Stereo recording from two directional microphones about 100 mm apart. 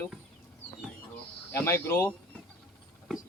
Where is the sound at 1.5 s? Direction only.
25° left (ahead or behind).